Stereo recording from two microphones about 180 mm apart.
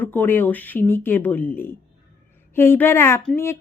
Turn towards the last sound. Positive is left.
turn(degrees=10)  # may be behind; listen again after turning